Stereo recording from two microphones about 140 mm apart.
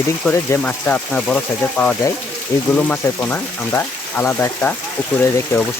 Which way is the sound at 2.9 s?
15° left (ahead or behind).